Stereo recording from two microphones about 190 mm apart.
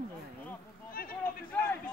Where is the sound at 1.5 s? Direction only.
10° left (ahead or behind).